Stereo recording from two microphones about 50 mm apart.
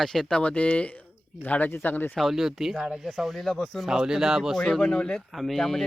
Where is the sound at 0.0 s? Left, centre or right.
Centre.